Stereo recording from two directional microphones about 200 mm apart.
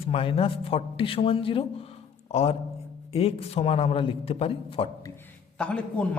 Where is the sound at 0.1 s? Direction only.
25° left (ahead or behind).